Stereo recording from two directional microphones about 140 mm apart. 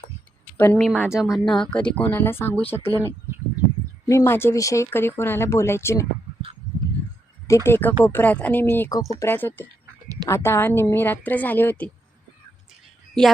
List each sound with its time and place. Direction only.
0.5 s speech: 15° left (ahead or behind)
0.8 s speech: 5° right (ahead or behind); by 2.9 s 15° left (ahead or behind)
4.1 s speech: 20° left (ahead or behind)
7.4 s speech: 20° left (ahead or behind)